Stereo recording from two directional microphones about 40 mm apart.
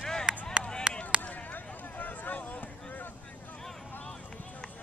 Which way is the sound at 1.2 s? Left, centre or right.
Left.